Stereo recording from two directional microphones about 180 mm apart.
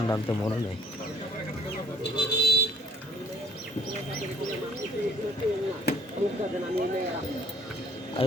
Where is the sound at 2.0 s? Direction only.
65° left (ahead or behind).